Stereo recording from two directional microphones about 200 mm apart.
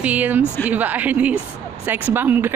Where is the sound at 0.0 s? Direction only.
5° right (ahead or behind).